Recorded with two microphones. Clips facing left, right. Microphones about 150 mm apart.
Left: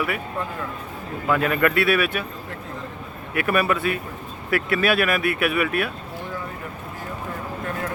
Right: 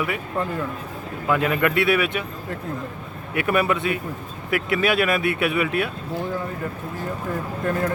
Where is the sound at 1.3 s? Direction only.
20° right (ahead or behind).